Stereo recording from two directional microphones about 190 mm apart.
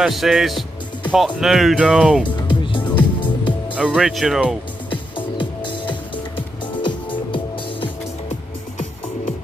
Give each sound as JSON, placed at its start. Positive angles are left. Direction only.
{"t": 0.0, "sound": "speech", "side_deg": 0}
{"t": 2.3, "sound": "music", "side_deg": 25}
{"t": 3.7, "sound": "speech", "side_deg": -5}
{"t": 4.8, "sound": "music", "side_deg": 25}